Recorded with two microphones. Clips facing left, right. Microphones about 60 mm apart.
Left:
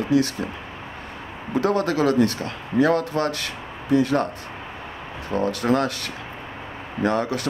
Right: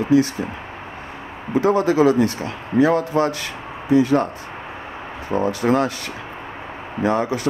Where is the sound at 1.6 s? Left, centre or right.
Centre.